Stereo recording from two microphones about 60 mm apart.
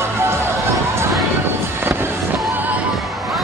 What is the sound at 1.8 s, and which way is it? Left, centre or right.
Music, right.